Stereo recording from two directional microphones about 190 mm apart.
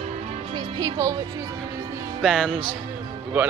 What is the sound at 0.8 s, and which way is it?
Speech, 15° right (ahead or behind).